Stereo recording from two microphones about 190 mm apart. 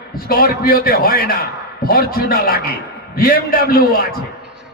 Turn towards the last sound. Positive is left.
turn(degrees=50)  # may be behind; listen again after turning